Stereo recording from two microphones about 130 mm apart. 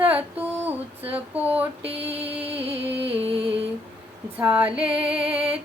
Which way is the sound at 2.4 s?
50° right (ahead or behind).